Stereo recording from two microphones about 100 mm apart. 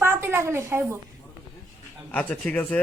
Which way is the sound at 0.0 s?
25° right (ahead or behind).